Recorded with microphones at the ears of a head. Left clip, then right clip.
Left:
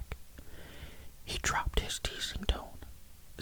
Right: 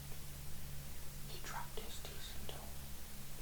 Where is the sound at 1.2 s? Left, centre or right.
Left.